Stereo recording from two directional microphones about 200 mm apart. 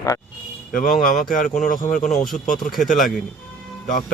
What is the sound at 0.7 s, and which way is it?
A man's voice, 40° left (ahead or behind).